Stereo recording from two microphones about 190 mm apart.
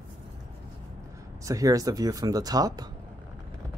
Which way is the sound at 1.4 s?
20° right (ahead or behind).